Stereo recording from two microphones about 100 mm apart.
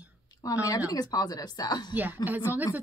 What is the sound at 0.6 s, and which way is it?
Speech, 35° left (ahead or behind).